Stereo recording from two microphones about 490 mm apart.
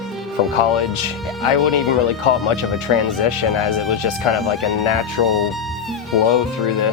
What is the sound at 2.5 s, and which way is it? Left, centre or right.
Speech, left.